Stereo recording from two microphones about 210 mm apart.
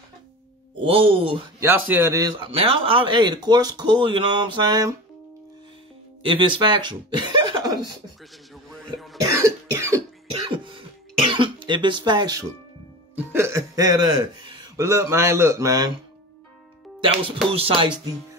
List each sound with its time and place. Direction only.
0.8 s speech: 25° right (ahead or behind)
1.6 s speech: 10° right (ahead or behind)
2.5 s speech: 25° right (ahead or behind)
6.2 s speech: 25° right (ahead or behind)
8.9 s cough: centre (ahead or behind)
9.2 s cough: 15° right (ahead or behind)
13.1 s music: 10° right (ahead or behind)
14.4 s speech: 15° right (ahead or behind)
17.5 s speech: 25° right (ahead or behind)